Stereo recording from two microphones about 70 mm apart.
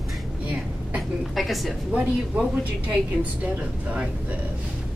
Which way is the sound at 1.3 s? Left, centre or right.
Centre.